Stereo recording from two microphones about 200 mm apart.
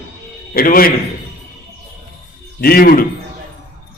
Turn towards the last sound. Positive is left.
turn(degrees=45)  # may be behind; listen again after turning